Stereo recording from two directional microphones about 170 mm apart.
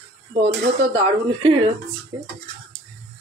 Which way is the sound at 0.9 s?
30° right (ahead or behind).